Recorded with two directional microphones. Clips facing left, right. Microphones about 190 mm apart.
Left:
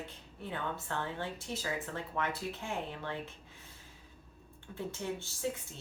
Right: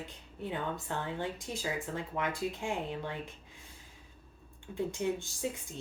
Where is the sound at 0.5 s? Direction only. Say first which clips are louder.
Right 1 dB; 15° right (ahead or behind).